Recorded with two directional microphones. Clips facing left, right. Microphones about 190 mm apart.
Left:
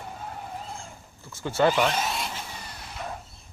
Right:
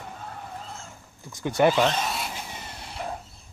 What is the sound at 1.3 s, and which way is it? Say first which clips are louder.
Speech: right 2 dB; 15° right (ahead or behind).